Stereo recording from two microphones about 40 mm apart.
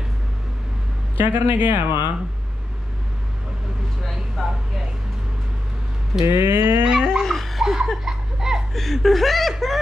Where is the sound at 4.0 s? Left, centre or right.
Centre.